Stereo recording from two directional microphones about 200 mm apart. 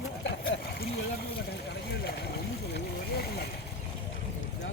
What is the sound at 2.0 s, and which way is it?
Speech, 50° left (ahead or behind).